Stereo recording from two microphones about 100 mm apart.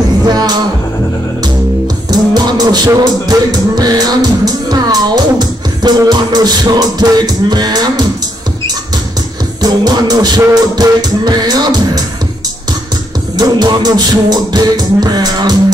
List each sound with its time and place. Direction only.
0.3 s music: 40° right (ahead or behind)
2.0 s music: 40° right (ahead or behind)
9.6 s music: 45° right (ahead or behind)
13.4 s music: 45° right (ahead or behind)